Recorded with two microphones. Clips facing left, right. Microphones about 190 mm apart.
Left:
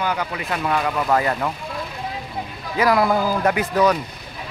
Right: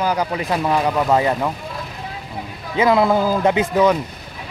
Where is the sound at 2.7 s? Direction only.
20° right (ahead or behind).